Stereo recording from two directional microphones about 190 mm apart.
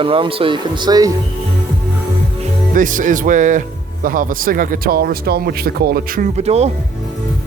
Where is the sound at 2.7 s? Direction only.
45° right (ahead or behind).